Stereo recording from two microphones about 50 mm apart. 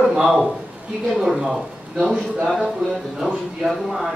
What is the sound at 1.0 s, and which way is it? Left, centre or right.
Speech, centre.